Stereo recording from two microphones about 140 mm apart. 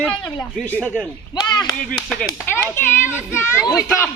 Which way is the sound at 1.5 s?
30° left (ahead or behind).